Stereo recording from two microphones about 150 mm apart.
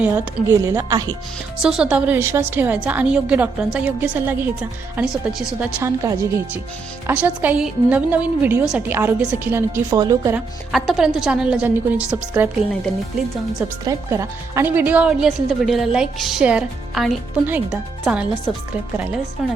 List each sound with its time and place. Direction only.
0.0 s a woman's voice: 20° right (ahead or behind)
1.6 s a woman's voice: 5° right (ahead or behind)
5.8 s a woman's voice: 20° right (ahead or behind)
10.3 s a woman's voice: centre (ahead or behind)
13.8 s a woman's voice: 20° right (ahead or behind); by 17.2 s centre (ahead or behind)
17.4 s a woman's voice: 10° right (ahead or behind)